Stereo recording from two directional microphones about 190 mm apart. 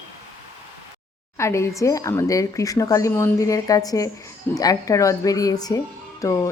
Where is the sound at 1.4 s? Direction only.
15° left (ahead or behind).